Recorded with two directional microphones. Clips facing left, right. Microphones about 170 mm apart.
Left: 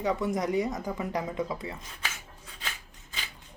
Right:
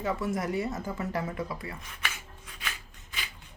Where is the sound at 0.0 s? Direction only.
20° left (ahead or behind).